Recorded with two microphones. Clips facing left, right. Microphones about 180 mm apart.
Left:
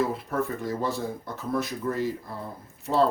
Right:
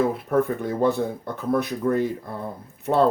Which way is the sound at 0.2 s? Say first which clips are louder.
Right 7 dB; 55° right (ahead or behind).